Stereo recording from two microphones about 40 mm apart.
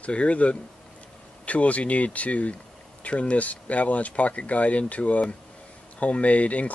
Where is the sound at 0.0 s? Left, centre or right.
Left.